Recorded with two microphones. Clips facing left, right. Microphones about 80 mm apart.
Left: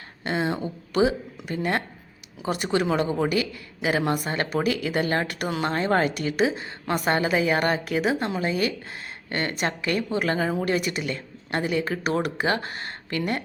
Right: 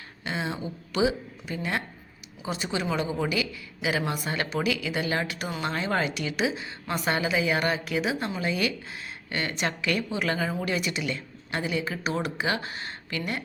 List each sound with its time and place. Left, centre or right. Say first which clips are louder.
0.3 s speech: left 5 dB; left
5.6 s a woman's voice: left 5 dB; left